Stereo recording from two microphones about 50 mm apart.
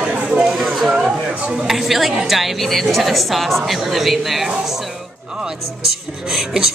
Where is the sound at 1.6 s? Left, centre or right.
Centre.